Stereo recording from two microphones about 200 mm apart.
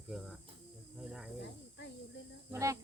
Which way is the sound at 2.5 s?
15° right (ahead or behind).